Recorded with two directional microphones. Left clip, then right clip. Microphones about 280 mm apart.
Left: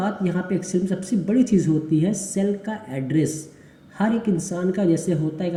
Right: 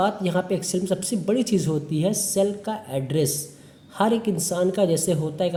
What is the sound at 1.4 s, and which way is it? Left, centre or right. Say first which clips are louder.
Speech: left 7 dB; right.